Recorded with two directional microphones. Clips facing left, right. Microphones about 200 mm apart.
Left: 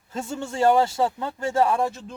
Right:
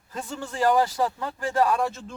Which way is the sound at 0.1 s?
25° left (ahead or behind).